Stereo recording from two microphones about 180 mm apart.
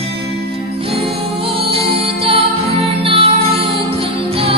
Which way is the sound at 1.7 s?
30° right (ahead or behind).